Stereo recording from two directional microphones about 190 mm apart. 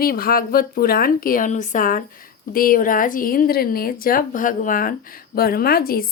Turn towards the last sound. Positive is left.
turn(degrees=50)  # may be behind; listen again after turning